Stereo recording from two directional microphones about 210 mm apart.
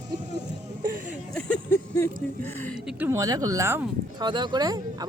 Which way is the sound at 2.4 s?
10° left (ahead or behind).